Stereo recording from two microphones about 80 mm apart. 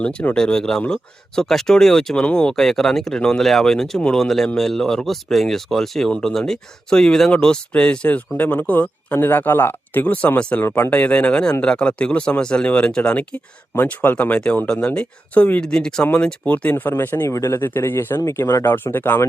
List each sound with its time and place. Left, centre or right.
0.0 s speech: centre
10.6 s speech: left
17.2 s speech: left
18.2 s speech: left
18.6 s speech: left